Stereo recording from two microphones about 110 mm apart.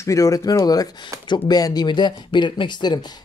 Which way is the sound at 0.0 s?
30° left (ahead or behind).